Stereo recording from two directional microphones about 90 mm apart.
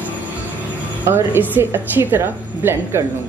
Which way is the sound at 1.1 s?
25° right (ahead or behind).